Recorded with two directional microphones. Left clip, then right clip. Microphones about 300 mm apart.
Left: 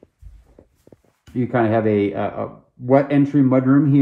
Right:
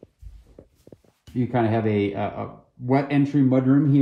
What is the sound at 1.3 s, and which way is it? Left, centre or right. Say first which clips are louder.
Speech: left 5 dB; centre.